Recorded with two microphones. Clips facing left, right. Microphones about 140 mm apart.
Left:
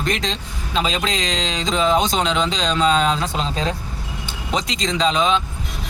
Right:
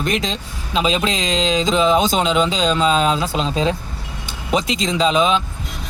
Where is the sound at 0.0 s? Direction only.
5° right (ahead or behind).